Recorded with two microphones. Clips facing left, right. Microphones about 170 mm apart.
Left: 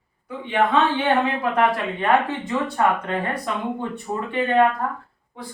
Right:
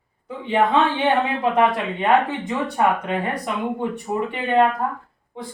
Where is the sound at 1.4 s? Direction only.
20° right (ahead or behind).